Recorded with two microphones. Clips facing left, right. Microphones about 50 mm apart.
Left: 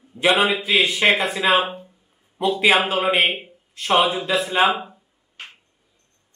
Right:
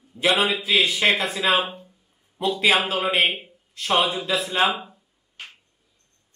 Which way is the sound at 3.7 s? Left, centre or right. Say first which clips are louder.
Left 3 dB; centre.